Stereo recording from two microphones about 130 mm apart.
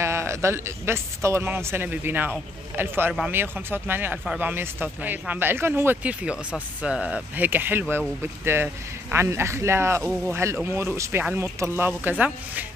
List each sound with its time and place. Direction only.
0.0 s speech: 20° right (ahead or behind)
9.1 s speech: 20° right (ahead or behind)